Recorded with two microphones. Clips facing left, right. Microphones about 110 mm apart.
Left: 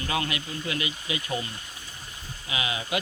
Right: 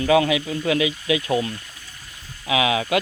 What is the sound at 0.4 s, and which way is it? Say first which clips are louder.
Speech: right 10 dB; 90° right.